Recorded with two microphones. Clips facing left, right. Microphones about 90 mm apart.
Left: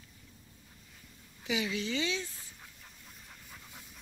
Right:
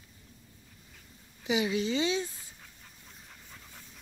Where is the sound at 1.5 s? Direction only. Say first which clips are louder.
Right 5 dB; 20° right (ahead or behind).